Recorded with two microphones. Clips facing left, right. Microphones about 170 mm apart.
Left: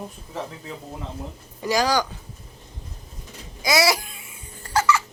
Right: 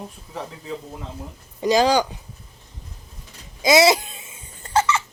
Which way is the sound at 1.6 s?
20° right (ahead or behind).